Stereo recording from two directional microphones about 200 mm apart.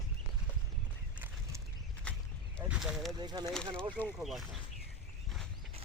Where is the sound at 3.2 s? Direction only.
20° right (ahead or behind).